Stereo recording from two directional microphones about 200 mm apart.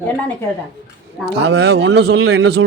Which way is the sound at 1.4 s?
55° right (ahead or behind).